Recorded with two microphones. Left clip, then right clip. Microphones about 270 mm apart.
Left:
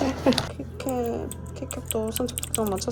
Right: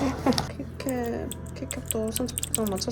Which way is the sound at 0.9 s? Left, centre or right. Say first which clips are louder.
Left 2 dB; centre.